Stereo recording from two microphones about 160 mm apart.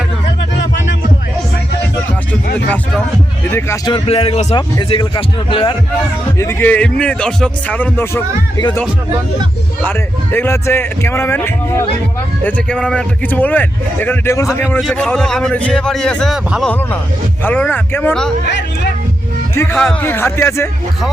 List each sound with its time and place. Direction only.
3.8 s speech: 35° left (ahead or behind)
6.4 s a man's voice: 15° left (ahead or behind)
9.8 s a man's voice: 10° left (ahead or behind)
14.9 s a man's voice: 5° left (ahead or behind)
17.4 s a man's voice: 10° left (ahead or behind)
19.5 s a man's voice: 15° left (ahead or behind)